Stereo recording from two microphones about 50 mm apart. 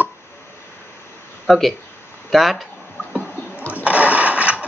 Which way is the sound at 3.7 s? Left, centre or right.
Right.